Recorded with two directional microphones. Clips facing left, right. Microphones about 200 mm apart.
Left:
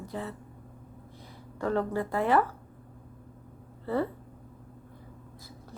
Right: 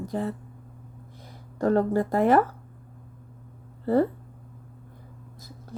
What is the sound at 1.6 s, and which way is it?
Speech, 40° right (ahead or behind).